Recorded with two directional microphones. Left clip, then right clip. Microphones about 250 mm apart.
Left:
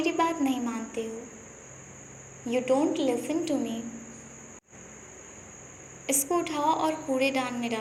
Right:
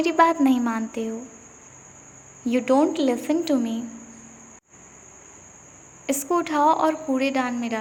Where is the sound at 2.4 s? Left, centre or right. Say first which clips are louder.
Right 5 dB; right.